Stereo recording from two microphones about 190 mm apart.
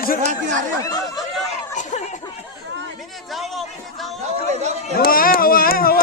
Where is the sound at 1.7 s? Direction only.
40° left (ahead or behind).